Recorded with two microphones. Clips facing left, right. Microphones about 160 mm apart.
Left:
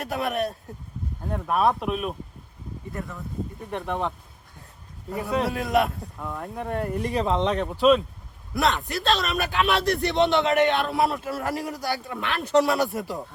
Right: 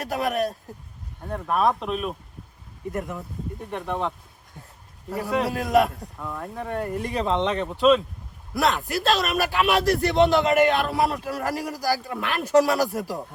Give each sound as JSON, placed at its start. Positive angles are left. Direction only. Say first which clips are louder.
{"t": 0.0, "sound": "a man's voice", "louder": "right 2 dB", "side_deg": 0}
{"t": 2.9, "sound": "speech", "louder": "right 5 dB", "side_deg": -20}
{"t": 3.6, "sound": "a man's voice", "louder": "right 1 dB", "side_deg": 0}